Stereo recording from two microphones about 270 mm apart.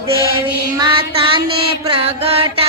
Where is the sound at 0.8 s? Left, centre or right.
Centre.